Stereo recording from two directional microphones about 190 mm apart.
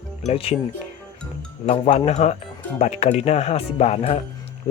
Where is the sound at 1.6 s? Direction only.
35° left (ahead or behind).